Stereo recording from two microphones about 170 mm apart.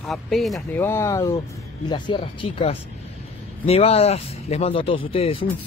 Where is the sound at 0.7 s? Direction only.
15° left (ahead or behind).